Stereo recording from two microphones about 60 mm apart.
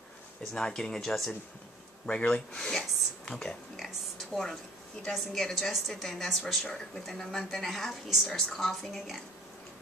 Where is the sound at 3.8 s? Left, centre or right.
Centre.